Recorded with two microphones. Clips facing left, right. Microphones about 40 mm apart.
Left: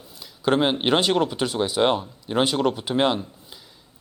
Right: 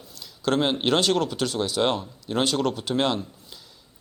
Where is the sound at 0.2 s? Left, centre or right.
Centre.